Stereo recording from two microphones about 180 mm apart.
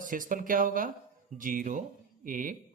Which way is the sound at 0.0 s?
50° right (ahead or behind).